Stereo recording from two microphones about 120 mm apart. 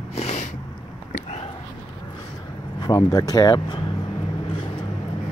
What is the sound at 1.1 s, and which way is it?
Whispering, 65° left (ahead or behind).